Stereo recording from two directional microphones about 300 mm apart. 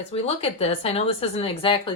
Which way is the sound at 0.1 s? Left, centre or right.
Centre.